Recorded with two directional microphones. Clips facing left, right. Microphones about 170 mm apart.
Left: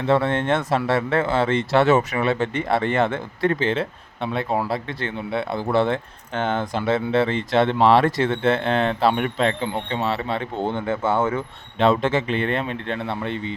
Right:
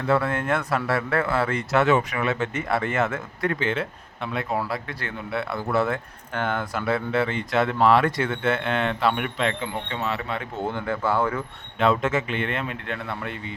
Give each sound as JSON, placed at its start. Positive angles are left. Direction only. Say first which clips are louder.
{"t": 0.0, "sound": "speech", "louder": "left 3 dB", "side_deg": 25}